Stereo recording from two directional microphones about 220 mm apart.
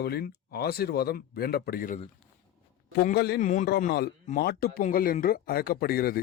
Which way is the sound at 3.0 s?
45° left (ahead or behind).